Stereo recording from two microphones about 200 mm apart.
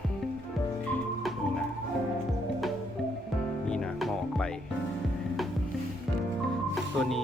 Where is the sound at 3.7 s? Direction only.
Centre (ahead or behind).